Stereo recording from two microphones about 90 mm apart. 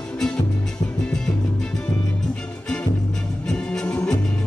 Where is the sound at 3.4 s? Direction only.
10° left (ahead or behind).